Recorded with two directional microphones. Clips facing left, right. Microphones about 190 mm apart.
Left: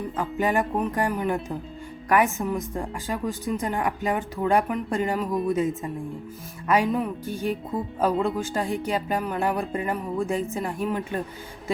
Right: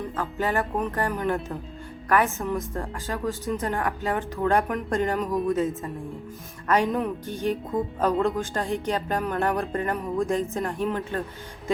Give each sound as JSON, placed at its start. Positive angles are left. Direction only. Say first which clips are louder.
{"t": 0.2, "sound": "music", "louder": "left 3 dB", "side_deg": 15}
{"t": 4.7, "sound": "speech", "louder": "even", "side_deg": 0}
{"t": 5.1, "sound": "music", "louder": "even", "side_deg": 5}